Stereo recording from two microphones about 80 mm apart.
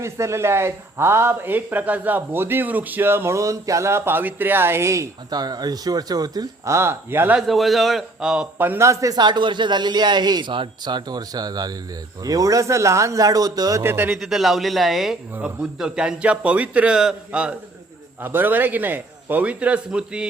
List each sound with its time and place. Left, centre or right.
0.0 s speech: right
5.3 s speech: right
6.7 s speech: right
7.4 s speech: centre
8.5 s speech: right
8.9 s speech: right
9.1 s speech: right
13.8 s speech: right
14.1 s speech: centre
15.3 s speech: right
15.8 s a man's voice: centre
18.2 s speech: right